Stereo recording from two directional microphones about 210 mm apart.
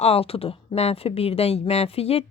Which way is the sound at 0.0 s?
30° left (ahead or behind).